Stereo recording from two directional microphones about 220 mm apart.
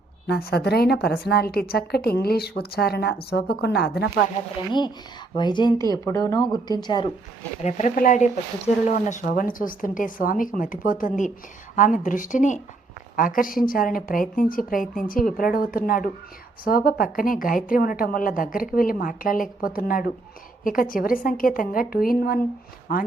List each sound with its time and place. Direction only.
0.3 s a woman's voice: 45° left (ahead or behind)
5.3 s speech: 20° left (ahead or behind)
7.6 s a woman's voice: 30° left (ahead or behind)